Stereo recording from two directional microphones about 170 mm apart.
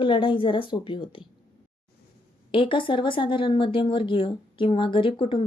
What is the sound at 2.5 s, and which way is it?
Speech, 30° left (ahead or behind).